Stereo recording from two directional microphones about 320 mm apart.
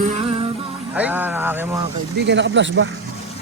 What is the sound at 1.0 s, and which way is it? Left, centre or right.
Music, centre.